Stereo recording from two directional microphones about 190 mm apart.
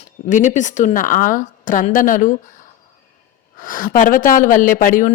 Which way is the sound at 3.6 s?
45° left (ahead or behind).